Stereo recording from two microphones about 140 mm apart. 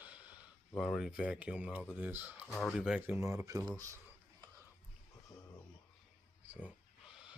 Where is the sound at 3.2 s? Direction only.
20° right (ahead or behind).